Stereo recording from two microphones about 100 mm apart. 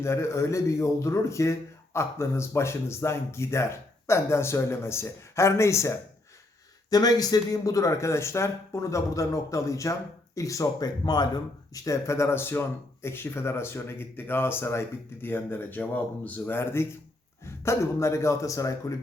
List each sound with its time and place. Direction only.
0.0 s speech: 25° left (ahead or behind)
6.9 s speech: 40° left (ahead or behind)
11.7 s speech: 30° left (ahead or behind)